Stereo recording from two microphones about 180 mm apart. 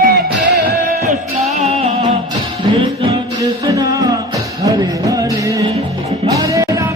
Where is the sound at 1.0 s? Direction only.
40° right (ahead or behind).